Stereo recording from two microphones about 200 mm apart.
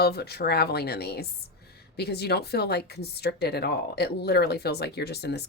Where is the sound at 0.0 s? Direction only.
55° left (ahead or behind).